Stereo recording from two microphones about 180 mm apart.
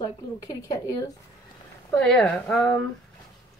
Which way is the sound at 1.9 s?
5° left (ahead or behind).